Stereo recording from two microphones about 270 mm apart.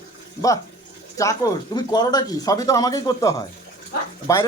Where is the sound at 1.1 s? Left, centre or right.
Centre.